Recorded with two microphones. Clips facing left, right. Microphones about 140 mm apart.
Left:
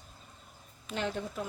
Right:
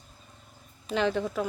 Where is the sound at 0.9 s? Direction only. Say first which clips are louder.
Right 8 dB; 90° right.